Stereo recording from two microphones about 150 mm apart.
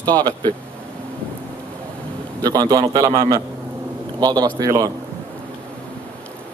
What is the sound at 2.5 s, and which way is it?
A man's voice, 30° right (ahead or behind).